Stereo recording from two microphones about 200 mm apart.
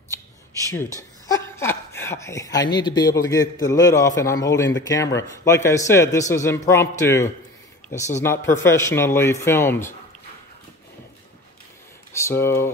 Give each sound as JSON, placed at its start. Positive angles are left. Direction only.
{"t": 1.2, "sound": "speech", "side_deg": 15}
{"t": 12.1, "sound": "speech", "side_deg": 15}